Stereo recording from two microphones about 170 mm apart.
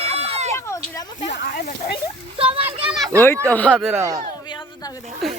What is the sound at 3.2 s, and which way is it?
Speech, 10° left (ahead or behind).